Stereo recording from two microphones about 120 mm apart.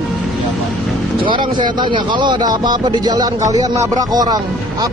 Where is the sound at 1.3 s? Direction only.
40° right (ahead or behind).